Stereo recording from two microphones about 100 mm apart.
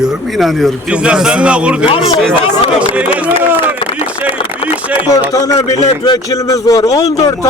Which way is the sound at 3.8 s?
65° left (ahead or behind).